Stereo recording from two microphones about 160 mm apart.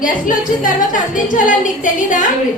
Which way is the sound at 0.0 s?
55° left (ahead or behind).